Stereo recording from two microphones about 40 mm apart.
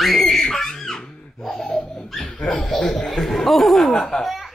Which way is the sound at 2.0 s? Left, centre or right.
Centre.